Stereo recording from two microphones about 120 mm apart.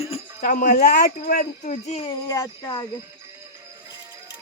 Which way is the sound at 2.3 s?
35° left (ahead or behind).